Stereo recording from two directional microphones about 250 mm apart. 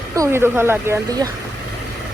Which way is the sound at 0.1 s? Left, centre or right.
Centre.